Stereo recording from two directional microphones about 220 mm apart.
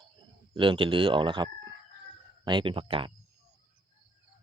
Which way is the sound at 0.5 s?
25° right (ahead or behind).